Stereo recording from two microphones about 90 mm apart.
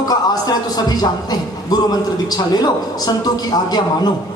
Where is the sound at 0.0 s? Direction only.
45° left (ahead or behind).